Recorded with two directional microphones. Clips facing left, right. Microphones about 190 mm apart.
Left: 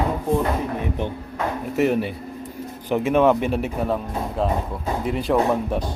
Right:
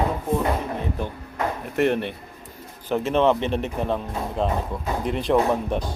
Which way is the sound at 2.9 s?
15° left (ahead or behind).